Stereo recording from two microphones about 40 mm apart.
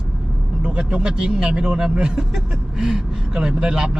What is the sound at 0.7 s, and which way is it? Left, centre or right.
Speech, centre.